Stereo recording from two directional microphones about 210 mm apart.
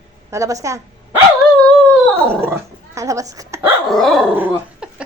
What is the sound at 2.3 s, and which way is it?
Speech, 10° right (ahead or behind).